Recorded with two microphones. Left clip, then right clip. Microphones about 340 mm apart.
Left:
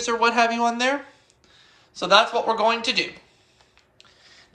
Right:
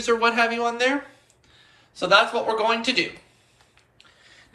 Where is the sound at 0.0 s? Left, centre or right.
Centre.